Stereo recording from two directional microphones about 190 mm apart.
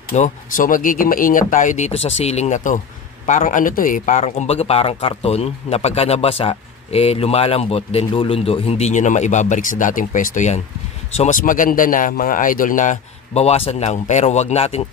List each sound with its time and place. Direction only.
0.1 s a man's voice: 40° left (ahead or behind)